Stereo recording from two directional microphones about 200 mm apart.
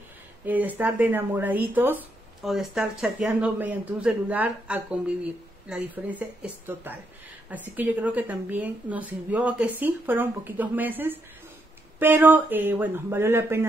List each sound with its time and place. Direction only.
0.5 s speech: 10° right (ahead or behind)